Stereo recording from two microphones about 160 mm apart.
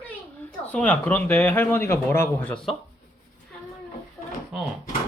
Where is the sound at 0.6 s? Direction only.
10° left (ahead or behind).